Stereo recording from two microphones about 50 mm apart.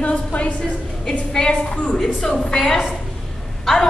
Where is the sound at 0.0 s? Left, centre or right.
Left.